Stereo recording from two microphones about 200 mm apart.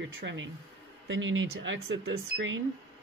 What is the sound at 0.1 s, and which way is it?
Speech, 65° right (ahead or behind).